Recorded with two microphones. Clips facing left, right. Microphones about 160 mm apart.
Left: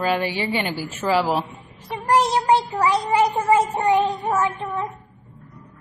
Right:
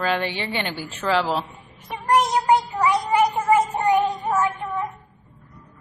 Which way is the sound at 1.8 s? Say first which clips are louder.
Left 1 dB; 30° left (ahead or behind).